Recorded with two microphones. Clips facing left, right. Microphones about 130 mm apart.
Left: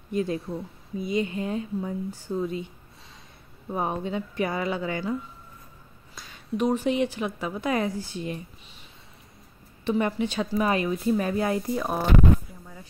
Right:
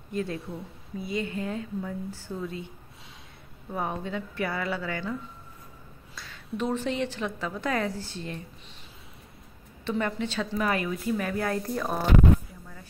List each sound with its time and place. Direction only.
0.1 s a woman's voice: 20° left (ahead or behind)
0.4 s a woman's voice: centre (ahead or behind)
0.9 s speech: 20° left (ahead or behind)
3.7 s speech: 20° left (ahead or behind)
6.1 s a woman's voice: 15° left (ahead or behind)
9.8 s a woman's voice: 15° left (ahead or behind)